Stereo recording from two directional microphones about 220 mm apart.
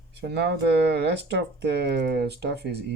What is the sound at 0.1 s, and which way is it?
Speech, 50° right (ahead or behind).